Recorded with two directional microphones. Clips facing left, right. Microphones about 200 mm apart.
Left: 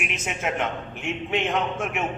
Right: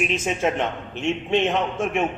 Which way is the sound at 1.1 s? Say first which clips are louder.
Right 6 dB; 30° right (ahead or behind).